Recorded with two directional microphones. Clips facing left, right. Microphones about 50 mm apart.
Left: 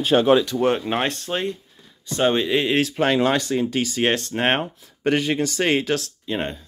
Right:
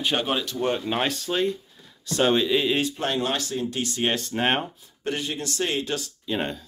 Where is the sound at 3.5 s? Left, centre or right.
Left.